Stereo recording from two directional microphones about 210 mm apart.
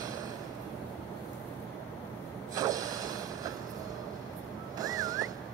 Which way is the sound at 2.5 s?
15° right (ahead or behind).